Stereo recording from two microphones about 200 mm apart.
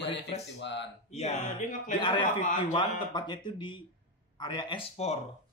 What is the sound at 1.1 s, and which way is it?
Speech, 35° left (ahead or behind).